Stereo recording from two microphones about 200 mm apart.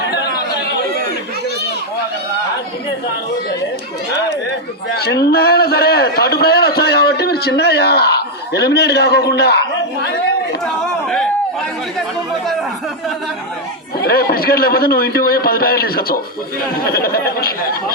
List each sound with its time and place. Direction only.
4.9 s a man's voice: 55° left (ahead or behind)
10.8 s chatter: centre (ahead or behind)
14.0 s a man's voice: 50° left (ahead or behind)